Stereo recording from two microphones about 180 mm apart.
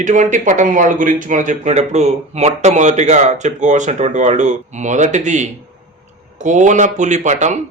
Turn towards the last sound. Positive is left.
turn(degrees=-40)  # may be behind; listen again after turning